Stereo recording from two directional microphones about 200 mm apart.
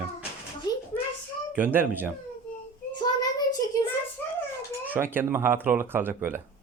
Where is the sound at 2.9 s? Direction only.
20° left (ahead or behind).